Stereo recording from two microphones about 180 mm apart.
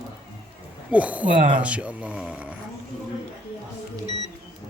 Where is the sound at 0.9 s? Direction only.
10° right (ahead or behind).